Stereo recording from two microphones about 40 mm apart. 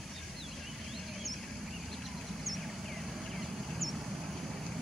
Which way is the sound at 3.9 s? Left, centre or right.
Centre.